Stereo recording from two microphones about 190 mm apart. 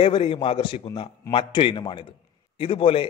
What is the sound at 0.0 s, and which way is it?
A man's voice, 30° left (ahead or behind).